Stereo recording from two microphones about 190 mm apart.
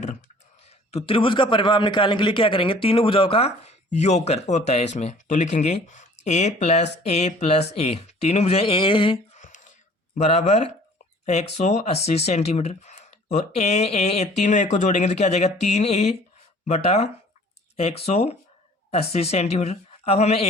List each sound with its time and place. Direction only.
0.9 s a man's voice: 30° left (ahead or behind)
9.4 s a sound: 40° left (ahead or behind)
10.2 s speech: 35° left (ahead or behind)